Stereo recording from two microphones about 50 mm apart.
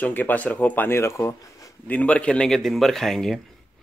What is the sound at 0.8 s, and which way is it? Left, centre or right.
Speech, left.